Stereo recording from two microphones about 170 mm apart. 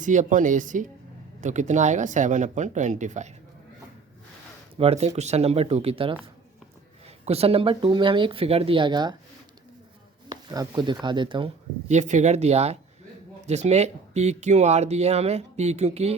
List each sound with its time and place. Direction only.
0.0 s speech: 50° right (ahead or behind)
4.8 s speech: 40° right (ahead or behind)
7.3 s speech: 35° right (ahead or behind)
10.2 s speech: 20° right (ahead or behind)
11.9 s speech: 45° right (ahead or behind)